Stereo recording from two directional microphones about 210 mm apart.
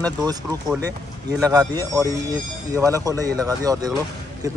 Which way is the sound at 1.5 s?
15° right (ahead or behind).